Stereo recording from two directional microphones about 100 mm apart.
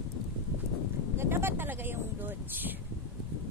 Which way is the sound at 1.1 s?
25° right (ahead or behind).